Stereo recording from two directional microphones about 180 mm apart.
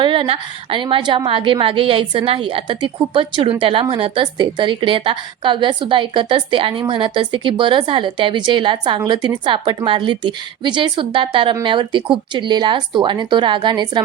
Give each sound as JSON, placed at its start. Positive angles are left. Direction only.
{"t": 0.0, "sound": "a woman's voice", "side_deg": -30}